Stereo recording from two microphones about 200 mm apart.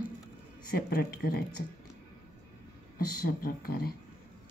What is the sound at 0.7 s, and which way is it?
Speech, 50° left (ahead or behind).